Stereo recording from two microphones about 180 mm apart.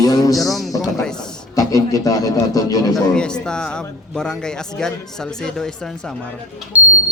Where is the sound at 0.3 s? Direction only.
Centre (ahead or behind).